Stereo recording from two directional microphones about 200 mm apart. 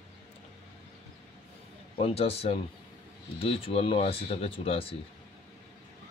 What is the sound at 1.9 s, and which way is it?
Speech, 30° left (ahead or behind).